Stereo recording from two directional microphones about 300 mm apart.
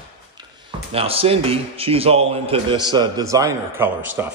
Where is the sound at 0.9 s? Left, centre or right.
Centre.